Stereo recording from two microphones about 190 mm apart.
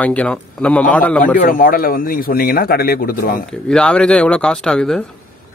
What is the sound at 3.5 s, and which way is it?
Speech, 5° left (ahead or behind).